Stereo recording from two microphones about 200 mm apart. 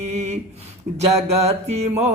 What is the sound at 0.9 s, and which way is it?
Speech, 30° right (ahead or behind).